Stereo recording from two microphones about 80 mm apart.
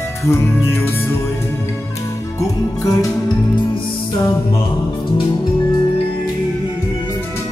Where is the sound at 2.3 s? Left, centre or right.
Left.